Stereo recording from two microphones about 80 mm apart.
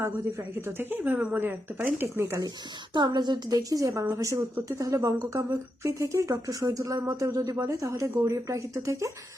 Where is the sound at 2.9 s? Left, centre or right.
Right.